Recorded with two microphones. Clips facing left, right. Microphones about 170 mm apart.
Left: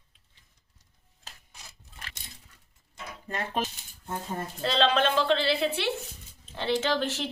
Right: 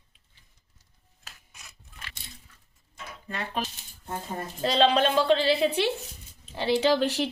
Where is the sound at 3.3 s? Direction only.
45° left (ahead or behind).